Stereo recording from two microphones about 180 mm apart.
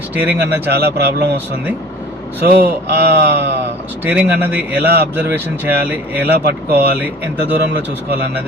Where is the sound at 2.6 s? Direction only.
70° right (ahead or behind).